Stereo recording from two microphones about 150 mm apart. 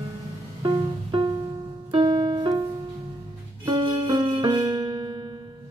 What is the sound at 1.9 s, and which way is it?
Piano, 35° right (ahead or behind).